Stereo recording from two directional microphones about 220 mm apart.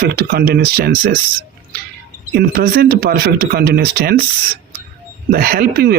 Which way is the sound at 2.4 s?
45° right (ahead or behind).